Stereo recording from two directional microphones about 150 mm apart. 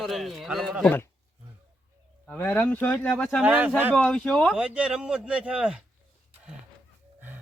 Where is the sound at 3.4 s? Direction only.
10° right (ahead or behind).